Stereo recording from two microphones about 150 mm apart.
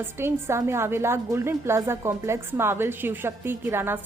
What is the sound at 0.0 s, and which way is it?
Speech, 15° right (ahead or behind).